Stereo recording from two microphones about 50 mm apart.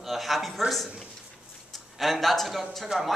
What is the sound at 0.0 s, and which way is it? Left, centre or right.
Speech, centre.